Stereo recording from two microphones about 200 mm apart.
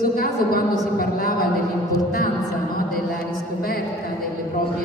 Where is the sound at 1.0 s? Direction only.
45° left (ahead or behind).